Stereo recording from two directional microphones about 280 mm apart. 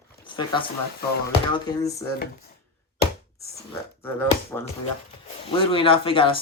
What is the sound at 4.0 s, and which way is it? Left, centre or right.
Speech, centre.